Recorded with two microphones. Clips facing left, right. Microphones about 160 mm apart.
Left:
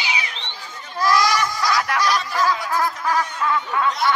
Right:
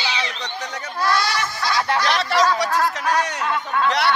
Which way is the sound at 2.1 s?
80° right.